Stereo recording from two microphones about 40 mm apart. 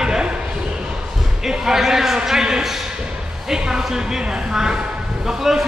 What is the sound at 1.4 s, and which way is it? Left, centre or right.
A man's voice, centre.